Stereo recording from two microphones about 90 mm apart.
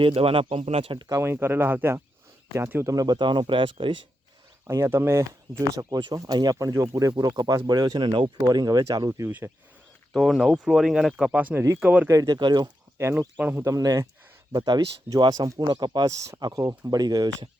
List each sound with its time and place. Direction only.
0.0 s speech: 90° right
1.2 s speech: 25° right (ahead or behind)
2.8 s speech: 45° right (ahead or behind)
3.2 s speech: 65° right (ahead or behind)
4.6 s speech: 30° right (ahead or behind); by 8.3 s 55° right (ahead or behind)
8.4 s speech: 45° right (ahead or behind)
10.1 s speech: centre (ahead or behind)
11.3 s speech: 15° right (ahead or behind)
12.0 s speech: 40° right (ahead or behind); by 12.7 s 55° right (ahead or behind)
13.1 s speech: 20° right (ahead or behind)
13.7 s speech: 40° right (ahead or behind)
16.0 s speech: 35° right (ahead or behind)